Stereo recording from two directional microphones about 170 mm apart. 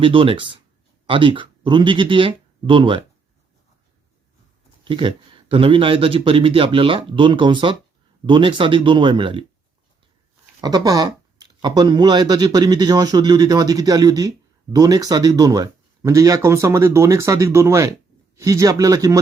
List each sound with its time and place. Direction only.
0.0 s speech: 30° right (ahead or behind)
4.9 s speech: 30° right (ahead or behind)
10.6 s speech: 25° right (ahead or behind)